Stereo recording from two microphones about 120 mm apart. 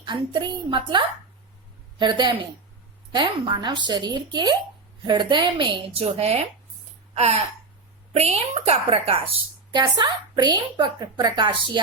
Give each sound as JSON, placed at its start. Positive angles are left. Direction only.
{"t": 0.0, "sound": "a woman's voice", "side_deg": -40}
{"t": 7.1, "sound": "a sound", "side_deg": -65}
{"t": 8.1, "sound": "a woman's voice", "side_deg": -60}
{"t": 9.7, "sound": "a woman's voice", "side_deg": -40}